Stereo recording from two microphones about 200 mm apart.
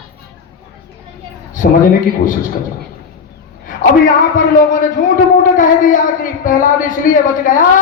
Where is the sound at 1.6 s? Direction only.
45° left (ahead or behind).